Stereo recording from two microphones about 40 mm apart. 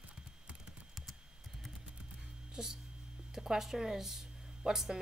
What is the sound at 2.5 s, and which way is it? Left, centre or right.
Speech, centre.